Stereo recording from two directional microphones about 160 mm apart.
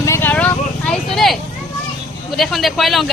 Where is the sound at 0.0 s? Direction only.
15° left (ahead or behind).